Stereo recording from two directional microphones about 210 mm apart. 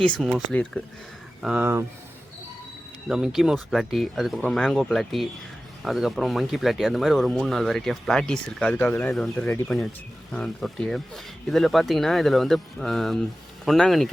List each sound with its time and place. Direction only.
0.2 s speech: centre (ahead or behind)
1.4 s speech: 5° right (ahead or behind)
3.1 s speech: 5° right (ahead or behind)